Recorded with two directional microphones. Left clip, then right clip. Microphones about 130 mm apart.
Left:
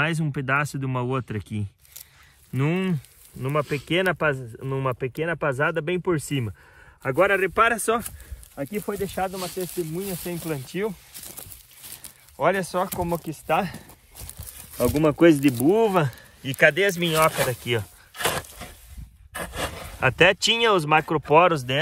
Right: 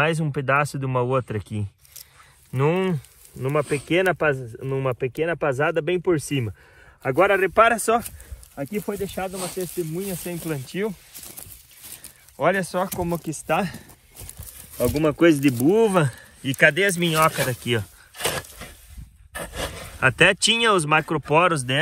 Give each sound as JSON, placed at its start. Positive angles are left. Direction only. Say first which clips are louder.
{"t": 0.0, "sound": "speech", "louder": "right 3 dB", "side_deg": -5}
{"t": 3.9, "sound": "speech", "louder": "right 2 dB", "side_deg": 0}
{"t": 7.7, "sound": "speech", "louder": "right 3 dB", "side_deg": -20}
{"t": 8.6, "sound": "speech", "louder": "even", "side_deg": 5}
{"t": 9.3, "sound": "speech", "louder": "right 1 dB", "side_deg": 15}
{"t": 9.6, "sound": "speech", "louder": "right 2 dB", "side_deg": 45}
{"t": 12.4, "sound": "speech", "louder": "right 1 dB", "side_deg": 50}
{"t": 13.2, "sound": "speech", "louder": "right 1 dB", "side_deg": 75}
{"t": 15.0, "sound": "speech", "louder": "left 1 dB", "side_deg": 55}
{"t": 18.2, "sound": "a sound", "louder": "left 1 dB", "side_deg": 20}
{"t": 18.5, "sound": "a sound", "louder": "even", "side_deg": 55}
{"t": 19.8, "sound": "speech", "louder": "right 1 dB", "side_deg": 60}